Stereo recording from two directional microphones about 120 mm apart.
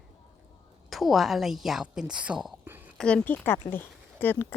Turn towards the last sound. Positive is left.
turn(degrees=15)  # may be behind; listen again after turning